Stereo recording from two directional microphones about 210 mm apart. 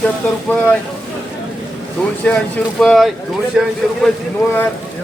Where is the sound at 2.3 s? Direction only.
5° left (ahead or behind).